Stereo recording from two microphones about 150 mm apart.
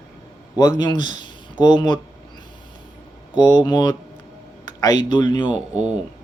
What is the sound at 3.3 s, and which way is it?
Speech, 25° left (ahead or behind).